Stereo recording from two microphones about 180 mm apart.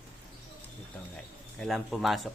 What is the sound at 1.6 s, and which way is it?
Speech, centre (ahead or behind).